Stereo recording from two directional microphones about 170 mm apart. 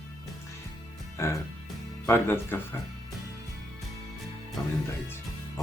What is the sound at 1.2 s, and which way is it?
Speech, 15° left (ahead or behind).